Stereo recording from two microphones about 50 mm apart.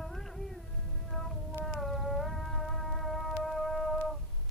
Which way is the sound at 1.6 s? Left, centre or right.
Centre.